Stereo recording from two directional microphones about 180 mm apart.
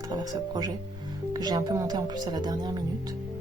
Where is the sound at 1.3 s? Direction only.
20° right (ahead or behind).